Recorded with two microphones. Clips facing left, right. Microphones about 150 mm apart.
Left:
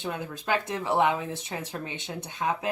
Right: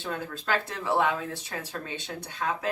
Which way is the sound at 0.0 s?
20° left (ahead or behind).